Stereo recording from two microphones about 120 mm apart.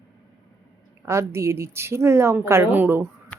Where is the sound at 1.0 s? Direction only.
20° right (ahead or behind).